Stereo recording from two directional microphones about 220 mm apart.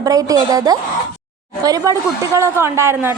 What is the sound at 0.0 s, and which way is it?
A woman's voice, 15° right (ahead or behind).